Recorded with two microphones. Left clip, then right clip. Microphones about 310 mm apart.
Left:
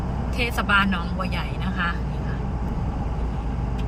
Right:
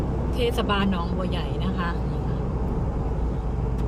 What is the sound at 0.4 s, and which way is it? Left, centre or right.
Speech, left.